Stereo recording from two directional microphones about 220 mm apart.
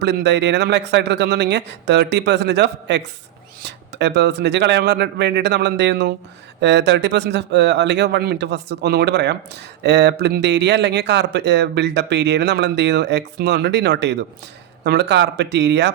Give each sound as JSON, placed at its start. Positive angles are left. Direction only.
{"t": 0.0, "sound": "a man's voice", "side_deg": -50}